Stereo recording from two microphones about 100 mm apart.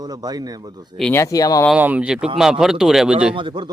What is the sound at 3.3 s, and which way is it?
Speech, 50° right (ahead or behind).